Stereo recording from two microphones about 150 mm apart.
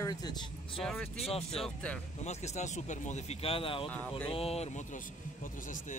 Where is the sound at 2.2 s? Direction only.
50° left (ahead or behind).